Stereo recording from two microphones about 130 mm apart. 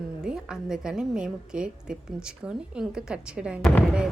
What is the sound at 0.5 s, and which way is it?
A woman's voice, 5° right (ahead or behind).